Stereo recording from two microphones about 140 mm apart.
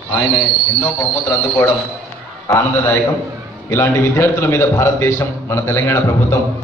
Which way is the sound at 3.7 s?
15° left (ahead or behind).